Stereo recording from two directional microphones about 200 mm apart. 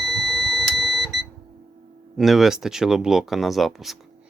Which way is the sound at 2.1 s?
Centre (ahead or behind).